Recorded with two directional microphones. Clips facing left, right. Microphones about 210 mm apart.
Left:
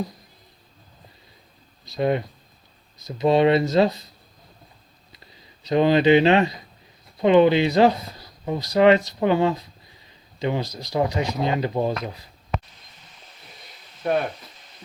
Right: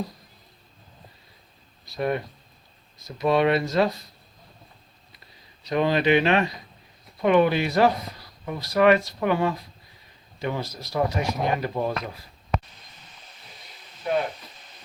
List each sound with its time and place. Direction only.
1.8 s speech: 25° left (ahead or behind)
5.6 s speech: 25° left (ahead or behind)
14.0 s speech: 50° left (ahead or behind)